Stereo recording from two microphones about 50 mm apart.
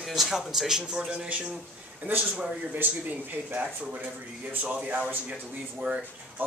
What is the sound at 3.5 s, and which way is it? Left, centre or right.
Speech, right.